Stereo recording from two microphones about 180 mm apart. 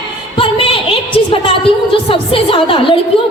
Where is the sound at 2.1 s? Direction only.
30° left (ahead or behind).